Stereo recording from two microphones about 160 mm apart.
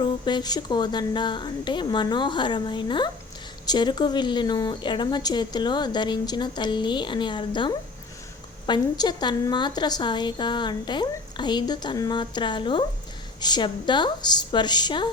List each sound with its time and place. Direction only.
0.0 s a woman's voice: 25° left (ahead or behind)